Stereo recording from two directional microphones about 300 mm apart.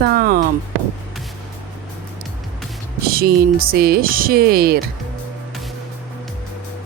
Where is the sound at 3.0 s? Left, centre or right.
Right.